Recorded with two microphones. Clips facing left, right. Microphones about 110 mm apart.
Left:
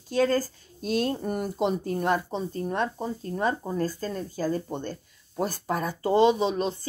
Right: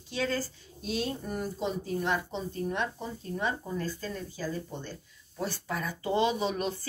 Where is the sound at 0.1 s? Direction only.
45° left (ahead or behind).